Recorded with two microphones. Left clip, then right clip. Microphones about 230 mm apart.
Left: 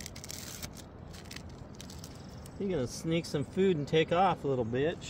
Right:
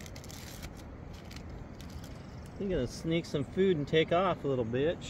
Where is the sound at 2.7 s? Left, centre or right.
Left.